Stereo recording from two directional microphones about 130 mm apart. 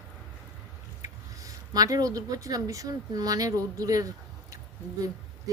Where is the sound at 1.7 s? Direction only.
30° right (ahead or behind).